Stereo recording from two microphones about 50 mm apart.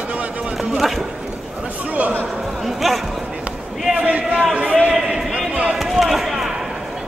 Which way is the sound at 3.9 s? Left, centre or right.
Right.